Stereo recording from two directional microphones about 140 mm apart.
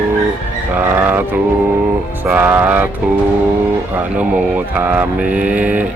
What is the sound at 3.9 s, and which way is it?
Speech, 10° right (ahead or behind).